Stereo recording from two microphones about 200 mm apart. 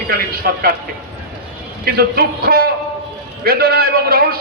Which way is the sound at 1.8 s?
50° right (ahead or behind).